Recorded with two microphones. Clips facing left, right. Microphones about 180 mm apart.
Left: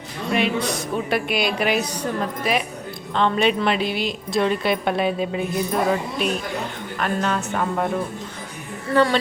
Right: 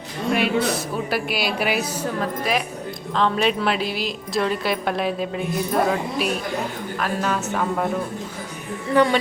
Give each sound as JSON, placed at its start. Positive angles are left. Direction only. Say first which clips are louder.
{"t": 0.3, "sound": "a woman's voice", "louder": "right 1 dB", "side_deg": -5}
{"t": 8.9, "sound": "a woman's voice", "louder": "right 1 dB", "side_deg": -15}